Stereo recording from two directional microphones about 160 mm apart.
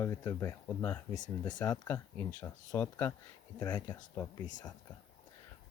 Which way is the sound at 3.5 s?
25° left (ahead or behind).